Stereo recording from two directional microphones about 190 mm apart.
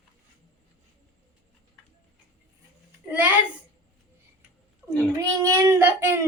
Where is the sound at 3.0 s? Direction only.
10° right (ahead or behind).